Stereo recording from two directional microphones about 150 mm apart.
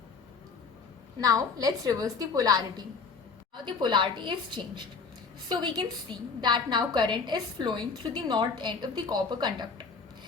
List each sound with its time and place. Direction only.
1.2 s a woman's voice: 25° right (ahead or behind)